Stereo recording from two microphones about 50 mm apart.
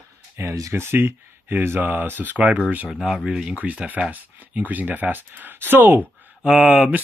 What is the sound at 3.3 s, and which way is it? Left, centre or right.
Speech, centre.